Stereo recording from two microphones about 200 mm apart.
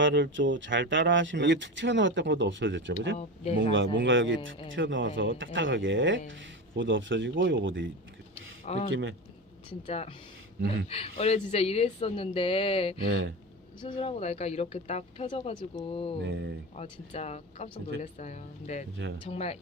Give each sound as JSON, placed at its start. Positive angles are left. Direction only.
{"t": 0.0, "sound": "speech", "side_deg": -65}
{"t": 3.2, "sound": "speech", "side_deg": 30}
{"t": 3.6, "sound": "speech", "side_deg": -70}
{"t": 8.6, "sound": "speech", "side_deg": 30}
{"t": 8.9, "sound": "speech", "side_deg": -75}
{"t": 9.6, "sound": "a woman's voice", "side_deg": 30}
{"t": 13.1, "sound": "speech", "side_deg": -80}
{"t": 13.8, "sound": "a woman's voice", "side_deg": 30}
{"t": 16.2, "sound": "speech", "side_deg": -65}
{"t": 16.7, "sound": "a woman's voice", "side_deg": 30}